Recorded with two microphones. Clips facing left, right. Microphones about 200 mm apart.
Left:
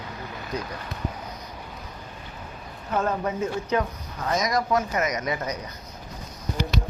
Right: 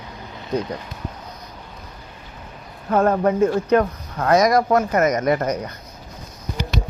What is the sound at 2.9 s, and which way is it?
Speech, 55° right (ahead or behind).